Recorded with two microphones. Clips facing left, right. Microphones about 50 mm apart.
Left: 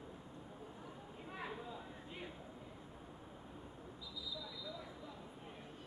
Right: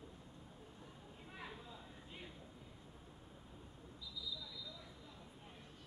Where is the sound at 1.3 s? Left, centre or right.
Centre.